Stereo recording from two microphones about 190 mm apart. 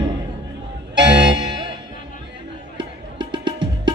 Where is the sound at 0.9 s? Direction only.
70° right (ahead or behind).